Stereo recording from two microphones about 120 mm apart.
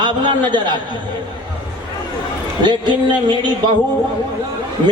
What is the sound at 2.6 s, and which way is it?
A man's voice, 40° right (ahead or behind).